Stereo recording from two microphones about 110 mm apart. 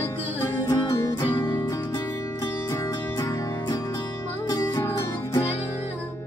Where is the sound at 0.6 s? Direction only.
35° left (ahead or behind).